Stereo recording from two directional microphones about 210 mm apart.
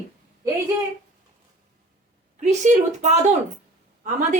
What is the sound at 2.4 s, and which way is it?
A woman's voice, 35° right (ahead or behind).